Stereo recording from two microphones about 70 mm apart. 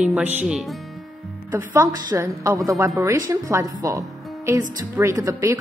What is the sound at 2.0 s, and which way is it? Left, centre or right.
A woman's voice, right.